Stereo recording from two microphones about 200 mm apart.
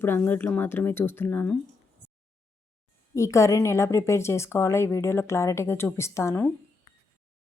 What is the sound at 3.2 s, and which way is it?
Speech, 15° left (ahead or behind).